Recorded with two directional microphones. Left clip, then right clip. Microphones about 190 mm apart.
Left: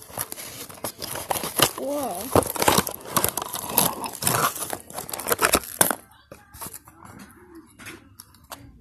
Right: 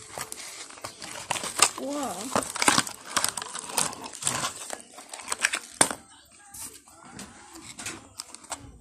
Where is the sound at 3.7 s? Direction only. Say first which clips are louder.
Left 6 dB; 20° left (ahead or behind).